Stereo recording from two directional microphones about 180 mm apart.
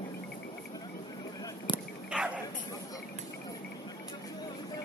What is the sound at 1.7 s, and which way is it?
Dog, 25° left (ahead or behind).